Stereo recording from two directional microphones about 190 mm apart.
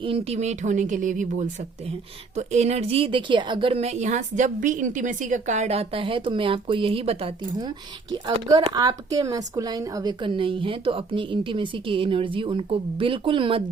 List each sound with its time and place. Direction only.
0.0 s a woman's voice: 30° right (ahead or behind)
8.1 s speech: 20° right (ahead or behind)